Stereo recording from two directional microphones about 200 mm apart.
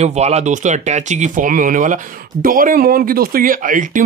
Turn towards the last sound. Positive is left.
turn(degrees=-40)  # may be behind; listen again after turning